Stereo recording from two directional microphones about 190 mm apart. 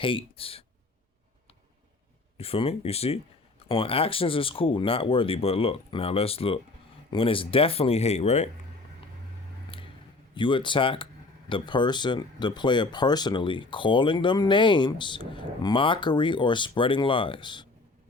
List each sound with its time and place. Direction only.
0.0 s speech: 25° left (ahead or behind)
2.4 s speech: 30° left (ahead or behind)
9.7 s a sound: 30° left (ahead or behind)
10.3 s speech: 25° left (ahead or behind)